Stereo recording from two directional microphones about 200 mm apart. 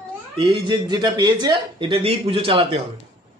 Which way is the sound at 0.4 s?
25° right (ahead or behind).